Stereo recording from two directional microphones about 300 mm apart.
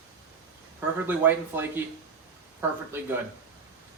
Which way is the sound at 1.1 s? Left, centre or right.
Centre.